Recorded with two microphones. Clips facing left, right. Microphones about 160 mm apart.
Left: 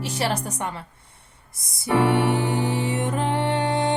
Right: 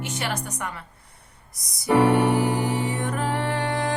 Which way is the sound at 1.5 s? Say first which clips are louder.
Right 2 dB; 25° left (ahead or behind).